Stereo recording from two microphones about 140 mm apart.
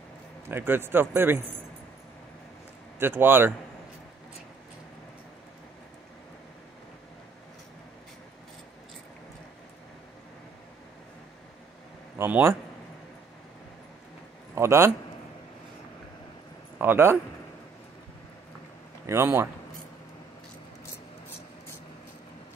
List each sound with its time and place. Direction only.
0.5 s speech: 15° right (ahead or behind)
3.0 s speech: 15° right (ahead or behind)
12.2 s speech: 15° right (ahead or behind)
14.5 s a man's voice: 20° right (ahead or behind)
16.7 s speech: 15° right (ahead or behind)
19.0 s speech: 20° right (ahead or behind)